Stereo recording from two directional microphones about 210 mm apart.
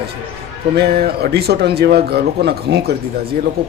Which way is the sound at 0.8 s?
50° right (ahead or behind).